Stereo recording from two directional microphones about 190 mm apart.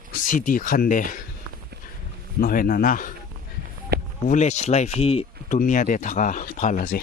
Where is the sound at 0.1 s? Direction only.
45° left (ahead or behind).